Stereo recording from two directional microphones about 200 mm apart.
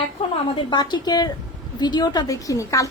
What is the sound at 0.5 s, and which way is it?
A woman's voice, 20° left (ahead or behind).